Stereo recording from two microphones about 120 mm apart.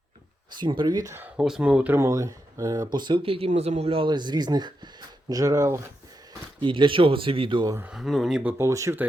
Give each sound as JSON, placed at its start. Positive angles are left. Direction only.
{"t": 0.5, "sound": "speech", "side_deg": -40}
{"t": 1.4, "sound": "speech", "side_deg": -5}
{"t": 2.0, "sound": "speech", "side_deg": -25}
{"t": 4.1, "sound": "speech", "side_deg": -40}
{"t": 6.6, "sound": "speech", "side_deg": -45}
{"t": 7.9, "sound": "speech", "side_deg": 0}
{"t": 8.4, "sound": "speech", "side_deg": -25}